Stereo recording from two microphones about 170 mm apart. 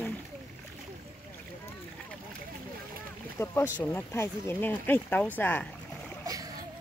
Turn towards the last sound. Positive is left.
turn(degrees=-20)  # may be behind; listen again after turning